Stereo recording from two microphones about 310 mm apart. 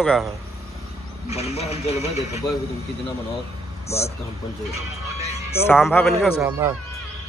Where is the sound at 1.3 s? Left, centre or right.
Centre.